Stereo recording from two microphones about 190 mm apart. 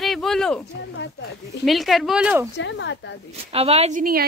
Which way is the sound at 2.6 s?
75° left (ahead or behind).